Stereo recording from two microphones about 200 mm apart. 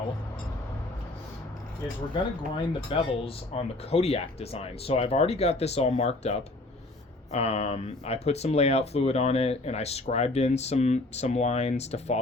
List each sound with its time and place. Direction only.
2.6 s speech: 30° left (ahead or behind)